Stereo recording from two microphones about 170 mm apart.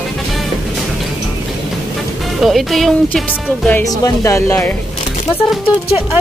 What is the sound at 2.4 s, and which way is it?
Speech, centre (ahead or behind).